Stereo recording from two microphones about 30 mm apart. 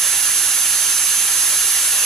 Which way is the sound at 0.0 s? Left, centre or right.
Centre.